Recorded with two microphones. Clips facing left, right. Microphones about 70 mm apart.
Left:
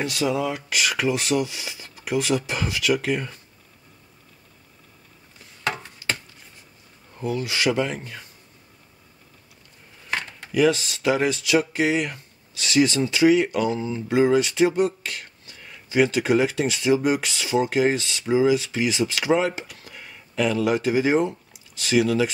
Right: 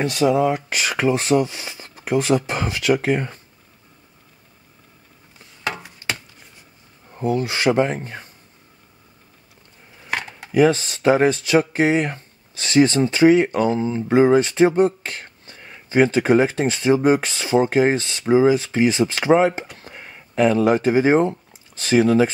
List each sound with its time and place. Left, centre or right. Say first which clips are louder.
0.0 s speech: right 6 dB; right
7.2 s speech: right 4 dB; right
10.0 s a sound: right 2 dB; centre
10.5 s speech: right 4 dB; right